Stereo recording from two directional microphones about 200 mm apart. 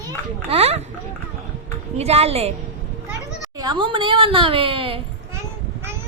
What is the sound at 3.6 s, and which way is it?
Speech, 25° right (ahead or behind).